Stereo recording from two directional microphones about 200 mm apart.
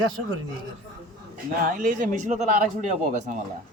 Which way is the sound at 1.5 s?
45° right (ahead or behind).